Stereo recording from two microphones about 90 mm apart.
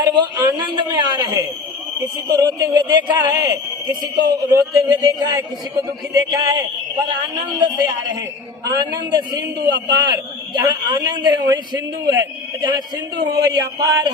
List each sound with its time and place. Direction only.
0.0 s a man's voice: 50° right (ahead or behind)
2.2 s a sound: 40° right (ahead or behind)
2.7 s a man's voice: 55° right (ahead or behind)
7.6 s a man's voice: 50° right (ahead or behind)